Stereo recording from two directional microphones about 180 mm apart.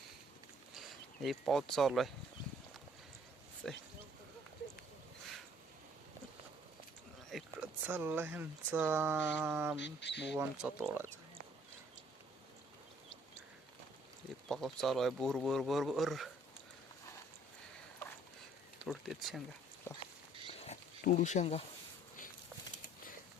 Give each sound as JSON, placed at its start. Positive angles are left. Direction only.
{"t": 0.7, "sound": "speech", "side_deg": 0}
{"t": 3.6, "sound": "speech", "side_deg": 5}
{"t": 7.3, "sound": "speech", "side_deg": -5}
{"t": 9.8, "sound": "speech", "side_deg": 75}
{"t": 10.2, "sound": "speech", "side_deg": -5}
{"t": 14.4, "sound": "speech", "side_deg": 0}
{"t": 18.8, "sound": "speech", "side_deg": 0}
{"t": 19.9, "sound": "rodents", "side_deg": 15}
{"t": 20.5, "sound": "a sound", "side_deg": 40}